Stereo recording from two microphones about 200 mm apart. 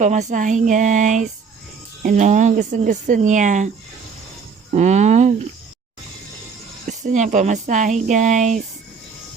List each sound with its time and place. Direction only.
0.0 s speech: 35° right (ahead or behind)
4.7 s a sound: 35° right (ahead or behind)
6.8 s speech: 40° right (ahead or behind)